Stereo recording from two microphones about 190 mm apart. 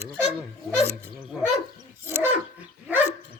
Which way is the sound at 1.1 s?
5° right (ahead or behind).